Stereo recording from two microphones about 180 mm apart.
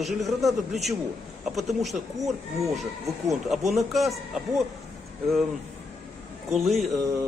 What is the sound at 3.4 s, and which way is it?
Speech, centre (ahead or behind).